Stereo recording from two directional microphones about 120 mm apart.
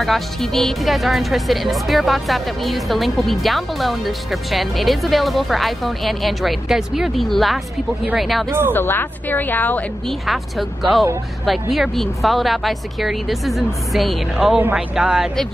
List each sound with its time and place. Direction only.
0.0 s speech: centre (ahead or behind)
8.5 s speech: 20° right (ahead or behind)
8.7 s a woman's voice: 15° left (ahead or behind)
10.2 s speech: centre (ahead or behind)